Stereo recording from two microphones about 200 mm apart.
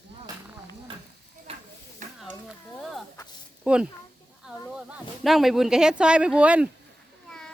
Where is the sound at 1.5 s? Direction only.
30° right (ahead or behind).